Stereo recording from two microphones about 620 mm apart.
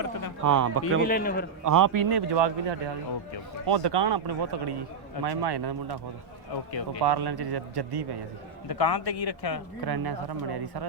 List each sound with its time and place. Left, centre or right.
0.4 s a man's voice: right
1.0 s a man's voice: centre
1.6 s a man's voice: right
7.0 s a man's voice: right
8.7 s a man's voice: left
9.0 s speech: left
9.8 s a man's voice: right